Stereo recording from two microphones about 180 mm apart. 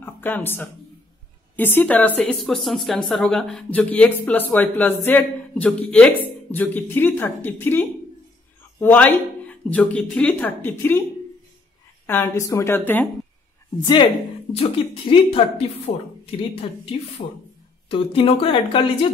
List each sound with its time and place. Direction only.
0.0 s a woman's voice: 10° left (ahead or behind)
12.1 s a woman's voice: 15° left (ahead or behind)
14.5 s speech: 30° left (ahead or behind)
17.2 s speech: 50° left (ahead or behind)
17.8 s speech: 30° left (ahead or behind)